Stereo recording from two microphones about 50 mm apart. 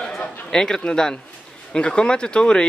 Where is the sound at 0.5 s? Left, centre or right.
Centre.